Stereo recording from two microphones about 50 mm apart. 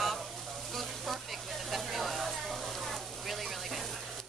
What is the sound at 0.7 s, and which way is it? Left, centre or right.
Sizzle, centre.